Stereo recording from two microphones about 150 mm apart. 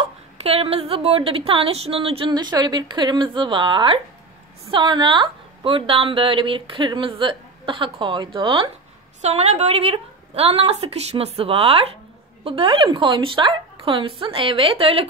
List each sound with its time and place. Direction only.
0.0 s a woman's voice: 40° right (ahead or behind)
9.2 s a woman's voice: 50° right (ahead or behind)